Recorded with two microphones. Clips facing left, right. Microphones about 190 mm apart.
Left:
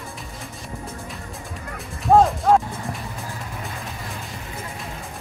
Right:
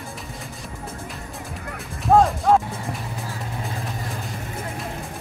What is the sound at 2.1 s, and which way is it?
Speech, centre (ahead or behind).